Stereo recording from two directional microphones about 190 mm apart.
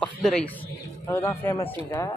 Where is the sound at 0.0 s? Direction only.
5° left (ahead or behind).